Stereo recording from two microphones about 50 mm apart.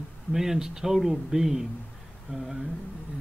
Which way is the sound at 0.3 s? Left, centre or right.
Centre.